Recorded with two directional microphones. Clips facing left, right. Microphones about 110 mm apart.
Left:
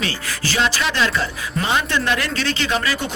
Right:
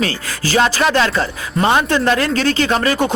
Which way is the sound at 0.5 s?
45° right (ahead or behind).